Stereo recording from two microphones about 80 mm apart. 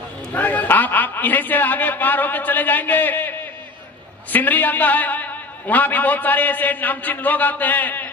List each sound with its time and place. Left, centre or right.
0.3 s a man's voice: left